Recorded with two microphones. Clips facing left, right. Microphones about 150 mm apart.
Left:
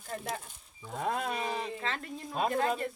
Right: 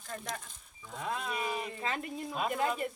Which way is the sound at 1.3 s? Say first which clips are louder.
Left 1 dB; 35° left (ahead or behind).